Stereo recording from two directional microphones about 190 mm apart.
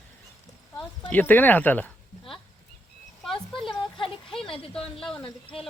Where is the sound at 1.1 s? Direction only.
10° left (ahead or behind).